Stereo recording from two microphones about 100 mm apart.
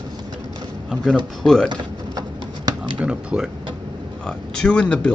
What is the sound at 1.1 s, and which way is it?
Speech, 5° left (ahead or behind).